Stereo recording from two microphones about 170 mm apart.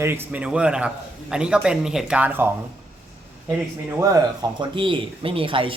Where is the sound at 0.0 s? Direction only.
15° right (ahead or behind).